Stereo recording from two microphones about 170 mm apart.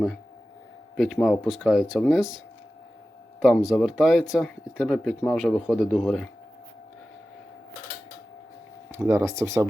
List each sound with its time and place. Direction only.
0.9 s speech: centre (ahead or behind)
3.4 s speech: centre (ahead or behind)
9.0 s speech: 15° right (ahead or behind)